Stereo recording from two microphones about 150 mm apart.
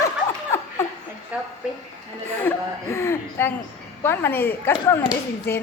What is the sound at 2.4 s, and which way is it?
A man's voice, 15° left (ahead or behind).